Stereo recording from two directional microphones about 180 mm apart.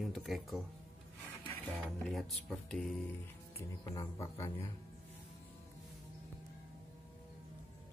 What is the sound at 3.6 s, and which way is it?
Speech, 20° left (ahead or behind).